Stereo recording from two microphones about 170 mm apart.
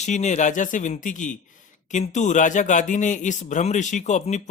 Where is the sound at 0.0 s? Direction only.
45° left (ahead or behind).